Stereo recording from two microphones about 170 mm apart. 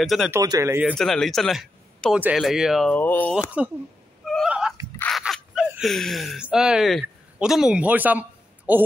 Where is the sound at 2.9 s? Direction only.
10° left (ahead or behind).